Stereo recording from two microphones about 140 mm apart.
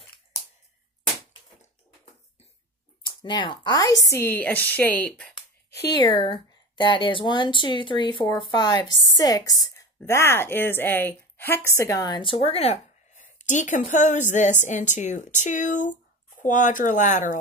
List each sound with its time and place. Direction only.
3.2 s a woman's voice: 35° left (ahead or behind); by 5.4 s 5° left (ahead or behind)
5.7 s a woman's voice: 30° left (ahead or behind); by 17.4 s 60° left (ahead or behind)